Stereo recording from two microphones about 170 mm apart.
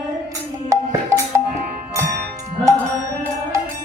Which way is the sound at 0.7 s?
20° right (ahead or behind).